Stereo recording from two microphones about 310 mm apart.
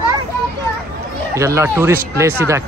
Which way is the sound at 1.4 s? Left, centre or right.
Centre.